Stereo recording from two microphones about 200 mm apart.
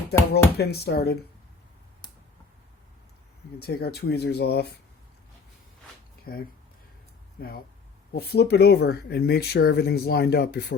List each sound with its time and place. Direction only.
0.2 s speech: 15° left (ahead or behind)
0.5 s speech: 55° left (ahead or behind)
3.6 s speech: 50° left (ahead or behind)
6.3 s speech: 45° left (ahead or behind)